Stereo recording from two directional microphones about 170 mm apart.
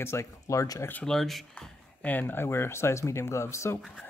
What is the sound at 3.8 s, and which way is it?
Speech, centre (ahead or behind).